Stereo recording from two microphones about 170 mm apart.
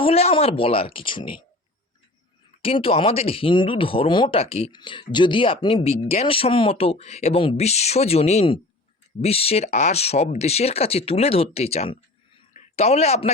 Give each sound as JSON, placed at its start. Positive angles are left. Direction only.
{"t": 0.0, "sound": "speech", "side_deg": 35}
{"t": 2.6, "sound": "a man's voice", "side_deg": 30}